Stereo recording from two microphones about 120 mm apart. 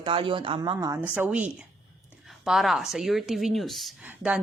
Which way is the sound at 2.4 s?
5° right (ahead or behind).